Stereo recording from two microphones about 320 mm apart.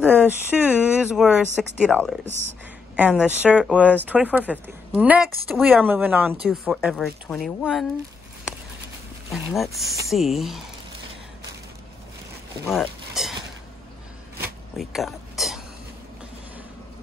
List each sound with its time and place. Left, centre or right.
0.0 s speech: centre
2.2 s speech: right
3.0 s speech: centre
9.3 s speech: centre
12.6 s speech: centre
14.8 s a sound: centre